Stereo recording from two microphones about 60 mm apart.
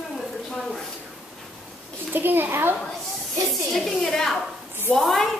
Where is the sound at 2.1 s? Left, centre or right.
Right.